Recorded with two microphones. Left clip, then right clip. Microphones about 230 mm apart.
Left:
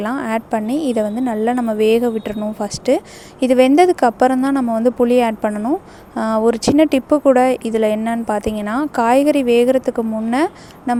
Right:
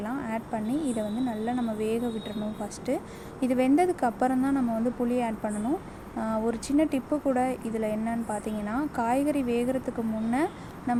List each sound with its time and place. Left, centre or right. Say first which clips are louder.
0.0 s a woman's voice: left 12 dB; left